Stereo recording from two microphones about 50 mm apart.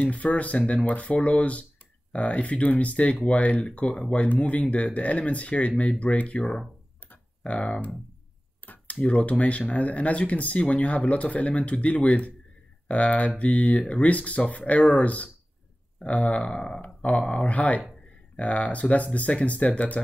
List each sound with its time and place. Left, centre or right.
0.0 s speech: left
7.4 s speech: left
8.6 s a sound: left
9.0 s speech: left
17.4 s speech: left